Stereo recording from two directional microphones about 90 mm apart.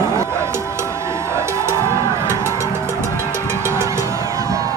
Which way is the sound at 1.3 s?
30° right (ahead or behind).